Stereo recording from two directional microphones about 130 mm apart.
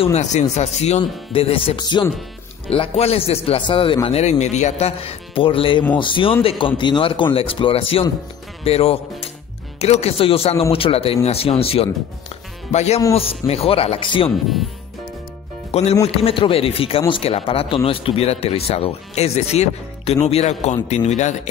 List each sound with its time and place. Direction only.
0.0 s speech: 60° left (ahead or behind)
1.3 s speech: 45° left (ahead or behind)
2.7 s speech: 50° left (ahead or behind)
4.2 s speech: 60° left (ahead or behind); by 14.3 s 40° left (ahead or behind)
15.7 s speech: 55° left (ahead or behind)